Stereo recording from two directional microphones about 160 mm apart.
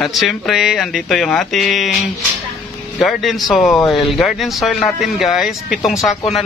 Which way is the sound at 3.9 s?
Centre (ahead or behind).